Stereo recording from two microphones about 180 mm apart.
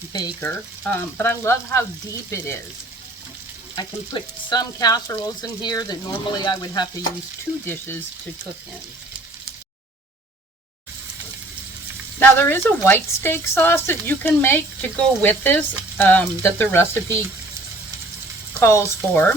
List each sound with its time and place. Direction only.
0.1 s speech: 20° left (ahead or behind)
0.4 s a woman's voice: 10° left (ahead or behind)
3.8 s speech: 25° left (ahead or behind)
7.6 s a woman's voice: 10° left (ahead or behind)
12.2 s a woman's voice: 10° left (ahead or behind)
18.6 s a woman's voice: 15° left (ahead or behind)